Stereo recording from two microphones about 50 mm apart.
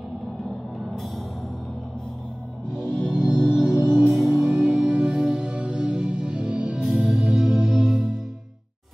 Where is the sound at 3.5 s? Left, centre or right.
Centre.